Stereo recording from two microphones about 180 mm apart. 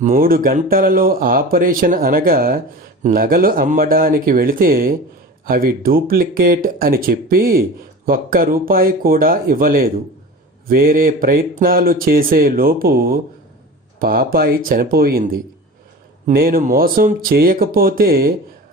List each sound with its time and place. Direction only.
0.0 s speech: 50° right (ahead or behind)